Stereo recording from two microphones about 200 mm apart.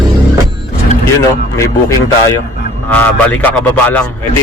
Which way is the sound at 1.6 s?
15° left (ahead or behind).